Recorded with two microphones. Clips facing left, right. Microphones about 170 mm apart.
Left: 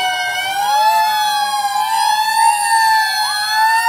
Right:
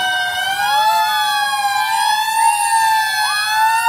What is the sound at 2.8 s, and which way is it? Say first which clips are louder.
Emergency vehicle: left 1 dB; 35° left (ahead or behind).